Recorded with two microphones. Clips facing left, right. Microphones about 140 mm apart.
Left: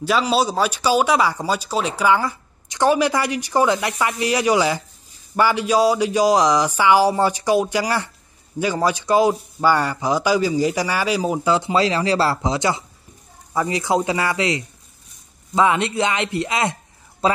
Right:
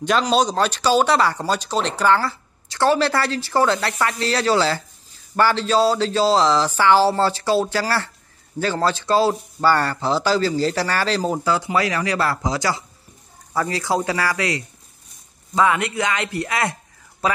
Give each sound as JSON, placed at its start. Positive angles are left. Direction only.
{"t": 0.0, "sound": "speech", "side_deg": 5}
{"t": 11.5, "sound": "speech", "side_deg": 25}
{"t": 17.2, "sound": "a sound", "side_deg": 30}